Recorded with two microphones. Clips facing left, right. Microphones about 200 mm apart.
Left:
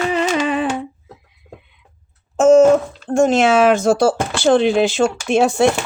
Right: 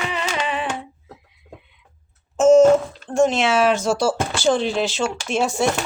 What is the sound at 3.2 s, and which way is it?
Speech, 50° left (ahead or behind).